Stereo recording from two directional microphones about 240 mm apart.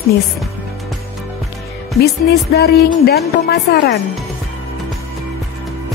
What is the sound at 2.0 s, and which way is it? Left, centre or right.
A woman's voice, left.